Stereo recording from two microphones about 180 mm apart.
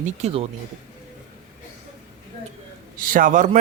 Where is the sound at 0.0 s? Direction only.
35° right (ahead or behind).